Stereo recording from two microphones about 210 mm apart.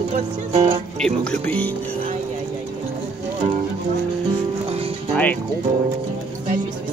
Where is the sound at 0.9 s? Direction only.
5° left (ahead or behind).